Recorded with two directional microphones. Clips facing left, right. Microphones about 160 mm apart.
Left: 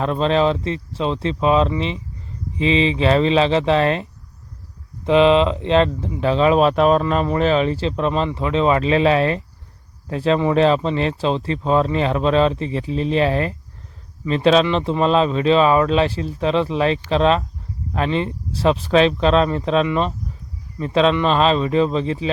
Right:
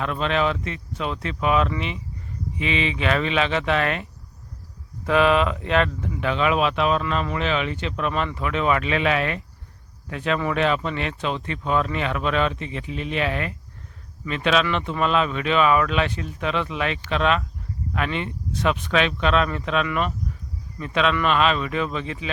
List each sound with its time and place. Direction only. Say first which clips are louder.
0.0 s speech: left 6 dB; 35° left (ahead or behind)